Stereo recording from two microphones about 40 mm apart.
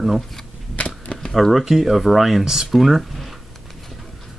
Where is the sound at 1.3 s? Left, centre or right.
Centre.